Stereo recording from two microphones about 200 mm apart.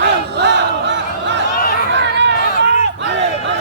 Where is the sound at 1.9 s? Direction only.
60° right (ahead or behind).